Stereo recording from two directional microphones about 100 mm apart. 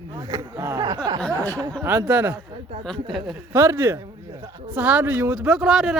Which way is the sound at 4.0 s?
40° right (ahead or behind).